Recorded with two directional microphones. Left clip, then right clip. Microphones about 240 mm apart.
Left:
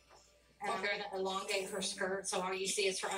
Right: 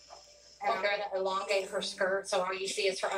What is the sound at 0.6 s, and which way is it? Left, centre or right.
A woman's voice, left.